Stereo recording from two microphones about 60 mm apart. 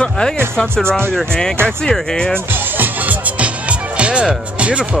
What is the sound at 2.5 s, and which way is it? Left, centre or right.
Music, right.